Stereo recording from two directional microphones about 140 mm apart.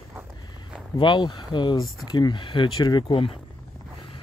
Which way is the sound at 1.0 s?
35° left (ahead or behind).